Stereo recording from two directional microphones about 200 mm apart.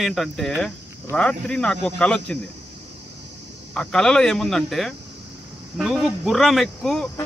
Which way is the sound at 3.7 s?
5° left (ahead or behind).